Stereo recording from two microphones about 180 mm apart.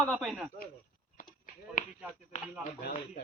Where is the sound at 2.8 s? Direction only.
55° left (ahead or behind).